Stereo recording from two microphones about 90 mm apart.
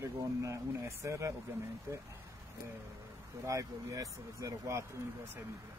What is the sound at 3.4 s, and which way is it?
Speech, 35° right (ahead or behind).